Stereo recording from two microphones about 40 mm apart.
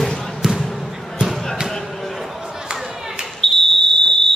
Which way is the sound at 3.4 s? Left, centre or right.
Centre.